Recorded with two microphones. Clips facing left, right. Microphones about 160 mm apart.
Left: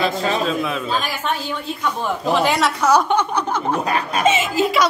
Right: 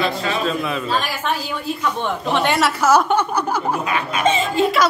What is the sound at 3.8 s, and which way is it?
Speech, 35° left (ahead or behind).